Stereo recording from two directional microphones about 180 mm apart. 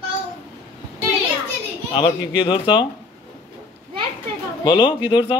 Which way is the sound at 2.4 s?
25° left (ahead or behind).